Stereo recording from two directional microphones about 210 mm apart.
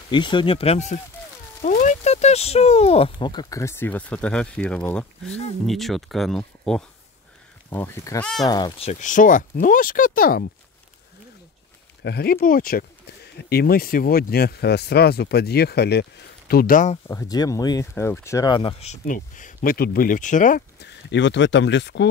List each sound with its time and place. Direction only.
0.1 s speech: 20° left (ahead or behind); by 10.4 s 40° left (ahead or behind)
12.0 s speech: 50° left (ahead or behind)
17.1 s speech: 15° left (ahead or behind); by 20.6 s 40° left (ahead or behind)
20.8 s speech: 55° left (ahead or behind)